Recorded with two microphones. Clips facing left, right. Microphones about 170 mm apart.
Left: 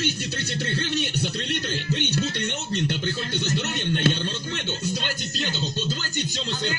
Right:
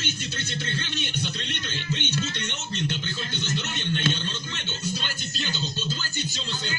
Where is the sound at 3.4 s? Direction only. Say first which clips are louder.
Left 2 dB; 45° left (ahead or behind).